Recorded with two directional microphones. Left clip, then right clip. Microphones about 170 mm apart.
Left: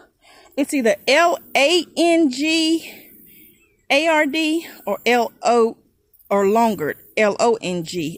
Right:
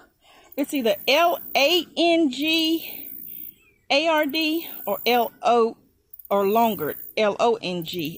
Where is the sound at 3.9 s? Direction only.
40° left (ahead or behind).